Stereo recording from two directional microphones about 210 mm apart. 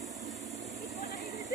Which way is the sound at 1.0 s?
15° right (ahead or behind).